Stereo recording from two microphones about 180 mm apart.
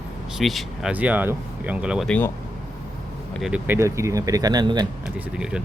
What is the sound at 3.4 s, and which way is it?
Speech, 10° right (ahead or behind).